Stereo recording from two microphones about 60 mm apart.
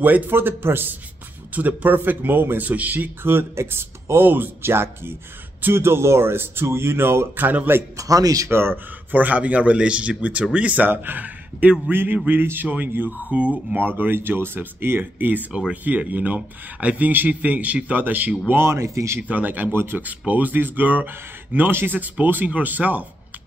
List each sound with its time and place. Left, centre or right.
0.0 s speech: right
1.5 s speech: right
8.0 s speech: right
8.5 s speech: right
9.1 s speech: right
13.7 s speech: right
18.5 s speech: right
19.2 s speech: right
19.7 s speech: right
20.0 s speech: right